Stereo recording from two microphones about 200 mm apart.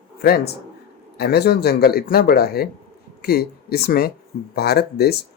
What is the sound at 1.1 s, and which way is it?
Speech, 55° left (ahead or behind).